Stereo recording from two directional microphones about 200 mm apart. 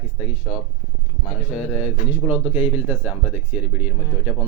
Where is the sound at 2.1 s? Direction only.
10° right (ahead or behind).